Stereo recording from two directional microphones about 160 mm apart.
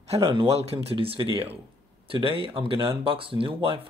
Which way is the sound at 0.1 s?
30° right (ahead or behind).